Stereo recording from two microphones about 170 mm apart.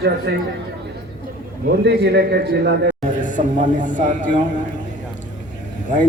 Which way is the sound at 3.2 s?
50° left (ahead or behind).